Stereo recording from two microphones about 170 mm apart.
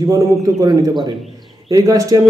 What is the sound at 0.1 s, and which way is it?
A man's voice, 20° right (ahead or behind).